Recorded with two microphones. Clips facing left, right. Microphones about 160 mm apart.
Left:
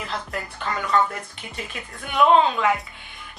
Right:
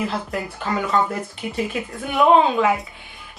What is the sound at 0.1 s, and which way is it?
A woman's voice, 15° right (ahead or behind).